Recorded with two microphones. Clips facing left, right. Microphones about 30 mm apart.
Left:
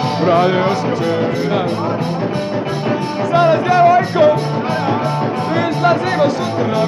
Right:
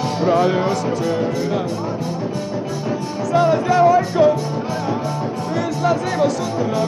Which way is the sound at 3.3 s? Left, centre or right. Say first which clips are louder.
Left 3 dB; left.